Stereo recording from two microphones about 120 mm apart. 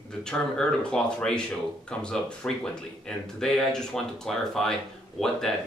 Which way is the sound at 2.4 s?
10° left (ahead or behind).